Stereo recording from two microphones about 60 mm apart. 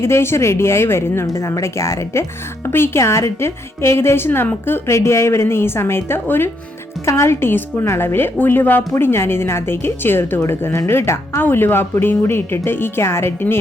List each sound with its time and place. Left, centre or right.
0.0 s a woman's voice: left
1.3 s speech: left
2.6 s a woman's voice: left
4.9 s a woman's voice: left
7.0 s a woman's voice: left
10.7 s a woman's voice: left